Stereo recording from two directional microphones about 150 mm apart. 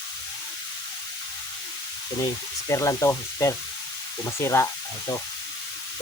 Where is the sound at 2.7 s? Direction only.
20° left (ahead or behind).